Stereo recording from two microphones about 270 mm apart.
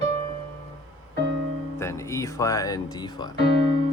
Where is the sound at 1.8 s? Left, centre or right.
Centre.